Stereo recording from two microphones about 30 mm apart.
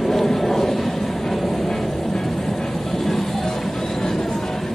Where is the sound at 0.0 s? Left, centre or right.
Centre.